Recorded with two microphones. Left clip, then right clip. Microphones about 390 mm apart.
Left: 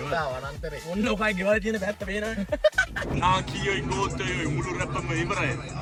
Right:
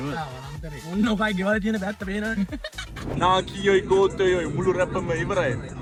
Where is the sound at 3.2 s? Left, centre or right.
Centre.